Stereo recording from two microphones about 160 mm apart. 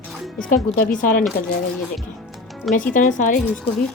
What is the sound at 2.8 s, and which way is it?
Speech, 55° left (ahead or behind).